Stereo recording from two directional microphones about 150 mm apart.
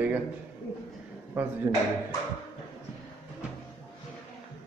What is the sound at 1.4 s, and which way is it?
Speech, 15° right (ahead or behind).